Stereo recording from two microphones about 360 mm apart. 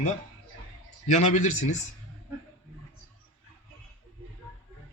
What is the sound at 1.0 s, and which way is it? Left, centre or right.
Speech, left.